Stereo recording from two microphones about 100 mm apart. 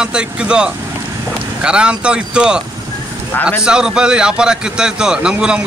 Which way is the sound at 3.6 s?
10° right (ahead or behind).